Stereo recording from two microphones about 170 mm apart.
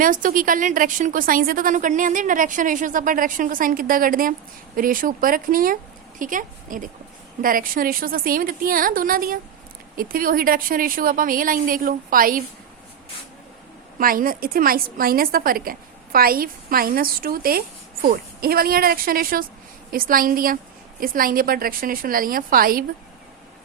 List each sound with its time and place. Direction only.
0.0 s a woman's voice: 55° right (ahead or behind)
14.0 s a woman's voice: 55° right (ahead or behind)